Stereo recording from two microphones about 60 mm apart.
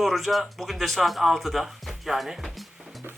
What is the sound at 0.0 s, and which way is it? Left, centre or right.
Speech, centre.